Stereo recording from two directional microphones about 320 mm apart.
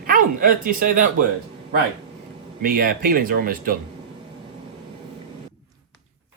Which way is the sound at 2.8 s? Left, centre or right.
Right.